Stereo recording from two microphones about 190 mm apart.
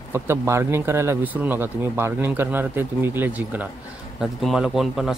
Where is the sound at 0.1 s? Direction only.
15° right (ahead or behind).